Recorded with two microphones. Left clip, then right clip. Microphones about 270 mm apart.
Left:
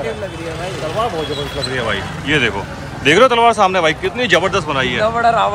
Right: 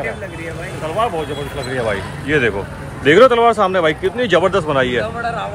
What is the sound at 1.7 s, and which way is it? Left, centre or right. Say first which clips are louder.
A man's voice: right 2 dB; centre.